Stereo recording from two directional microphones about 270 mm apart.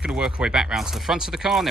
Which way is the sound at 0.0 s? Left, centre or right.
Centre.